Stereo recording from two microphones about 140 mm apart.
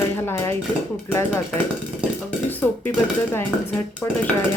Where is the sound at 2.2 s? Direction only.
15° left (ahead or behind).